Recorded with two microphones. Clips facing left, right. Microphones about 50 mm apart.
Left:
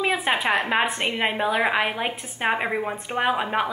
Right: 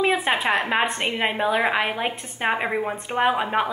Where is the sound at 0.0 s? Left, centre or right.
Centre.